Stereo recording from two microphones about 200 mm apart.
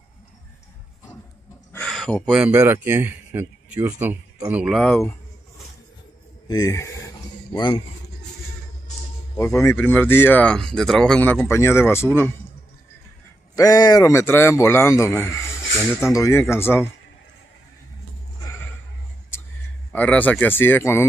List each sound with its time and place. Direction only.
1.7 s speech: 5° left (ahead or behind)
6.4 s a sound: 15° left (ahead or behind)
9.4 s speech: 15° left (ahead or behind)
13.6 s speech: 20° left (ahead or behind)
19.9 s speech: 5° left (ahead or behind)